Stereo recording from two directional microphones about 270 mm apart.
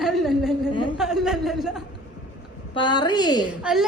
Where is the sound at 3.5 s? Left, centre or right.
Centre.